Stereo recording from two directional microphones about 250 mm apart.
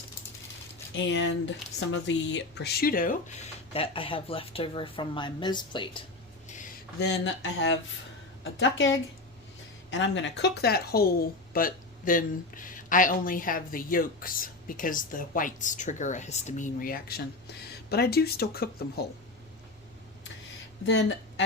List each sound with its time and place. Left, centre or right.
0.9 s speech: left; by 6.0 s centre
7.0 s speech: left
20.8 s speech: left